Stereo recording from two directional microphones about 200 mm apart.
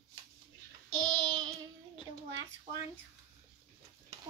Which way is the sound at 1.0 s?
20° right (ahead or behind).